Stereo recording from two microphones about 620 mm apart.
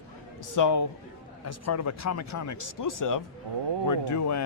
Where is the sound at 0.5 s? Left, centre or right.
Left.